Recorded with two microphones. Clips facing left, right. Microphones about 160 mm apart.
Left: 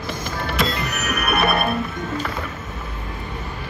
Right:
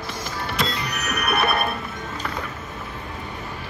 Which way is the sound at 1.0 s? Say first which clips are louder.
Left 2 dB; 10° left (ahead or behind).